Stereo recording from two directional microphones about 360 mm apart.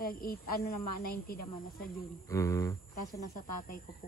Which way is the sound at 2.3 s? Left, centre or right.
Centre.